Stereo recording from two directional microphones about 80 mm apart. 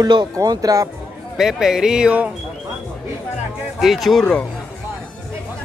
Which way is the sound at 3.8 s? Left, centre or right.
Centre.